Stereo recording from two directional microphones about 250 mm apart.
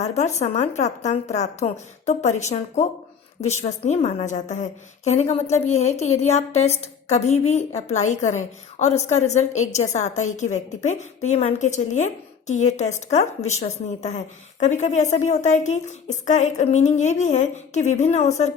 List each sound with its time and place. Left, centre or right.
0.0 s a woman's voice: left